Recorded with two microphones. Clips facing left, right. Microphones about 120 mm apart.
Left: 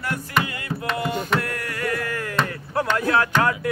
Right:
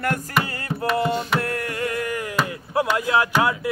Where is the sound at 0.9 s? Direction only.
30° right (ahead or behind).